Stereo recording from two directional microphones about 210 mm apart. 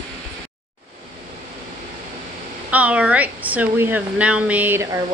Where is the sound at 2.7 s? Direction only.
5° right (ahead or behind).